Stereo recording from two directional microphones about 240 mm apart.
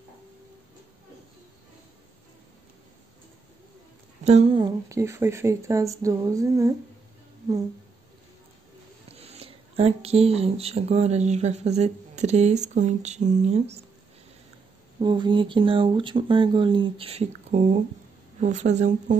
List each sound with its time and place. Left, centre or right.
4.2 s speech: right
9.1 s speech: right
15.0 s speech: centre